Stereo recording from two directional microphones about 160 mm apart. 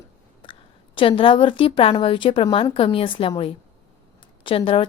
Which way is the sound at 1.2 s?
35° left (ahead or behind).